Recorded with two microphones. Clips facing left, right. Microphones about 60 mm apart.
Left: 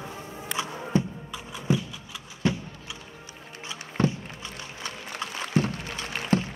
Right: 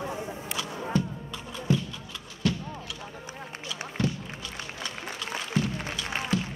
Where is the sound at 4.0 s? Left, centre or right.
Left.